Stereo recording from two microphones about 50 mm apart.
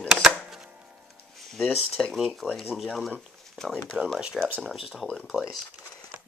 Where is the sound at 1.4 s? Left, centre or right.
Centre.